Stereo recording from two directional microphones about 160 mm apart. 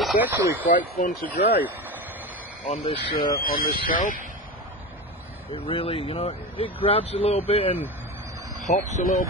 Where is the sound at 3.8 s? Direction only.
60° left (ahead or behind).